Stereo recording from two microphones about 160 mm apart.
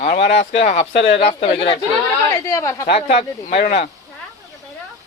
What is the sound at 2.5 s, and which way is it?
Speech, 20° left (ahead or behind).